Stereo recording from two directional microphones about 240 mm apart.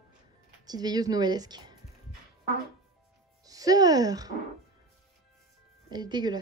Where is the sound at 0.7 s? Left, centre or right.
Centre.